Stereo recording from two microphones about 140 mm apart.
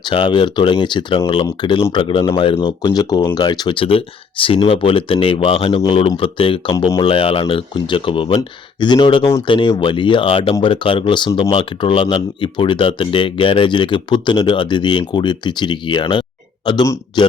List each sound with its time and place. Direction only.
0.0 s speech: 35° left (ahead or behind)
7.0 s speech: 40° left (ahead or behind)